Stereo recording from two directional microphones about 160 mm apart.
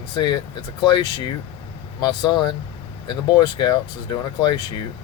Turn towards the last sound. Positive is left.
turn(degrees=25)  # may be behind; listen again after turning